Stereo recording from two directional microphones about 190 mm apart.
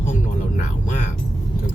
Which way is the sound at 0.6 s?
40° left (ahead or behind).